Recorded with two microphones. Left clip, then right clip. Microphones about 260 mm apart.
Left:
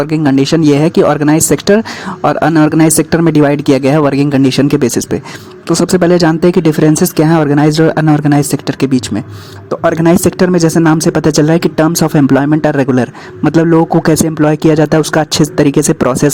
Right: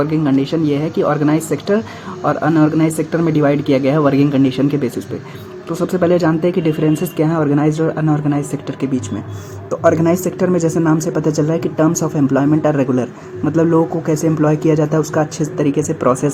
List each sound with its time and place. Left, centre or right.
0.0 s speech: left
10.6 s speech: left
11.3 s speech: left
11.5 s speech: left
11.9 s speech: left
13.7 s speech: left
14.8 s speech: left